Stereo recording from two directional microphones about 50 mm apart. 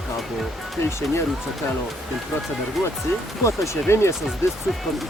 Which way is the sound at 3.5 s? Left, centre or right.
Left.